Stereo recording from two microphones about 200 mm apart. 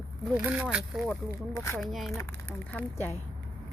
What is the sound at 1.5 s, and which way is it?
Speech, 15° left (ahead or behind).